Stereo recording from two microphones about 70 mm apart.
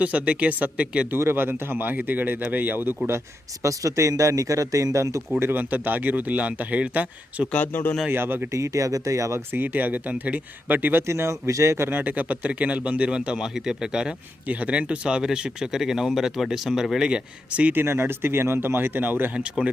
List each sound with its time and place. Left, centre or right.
0.0 s speech: centre
1.1 s speech: right
3.6 s speech: right
5.4 s speech: right
7.5 s speech: left
8.1 s speech: right
8.5 s speech: right
9.5 s speech: right
11.0 s speech: right
11.9 s speech: right; by 14.1 s centre
14.4 s speech: right; by 17.1 s centre
17.1 s speech: centre
17.7 s speech: right
19.4 s speech: centre